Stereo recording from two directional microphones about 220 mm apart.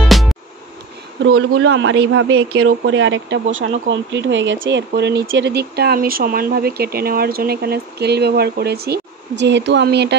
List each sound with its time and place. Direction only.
0.0 s music: centre (ahead or behind)
1.2 s speech: 65° right (ahead or behind); by 10.1 s 50° right (ahead or behind)